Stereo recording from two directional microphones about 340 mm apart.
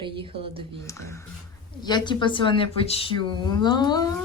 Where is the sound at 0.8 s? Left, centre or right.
Centre.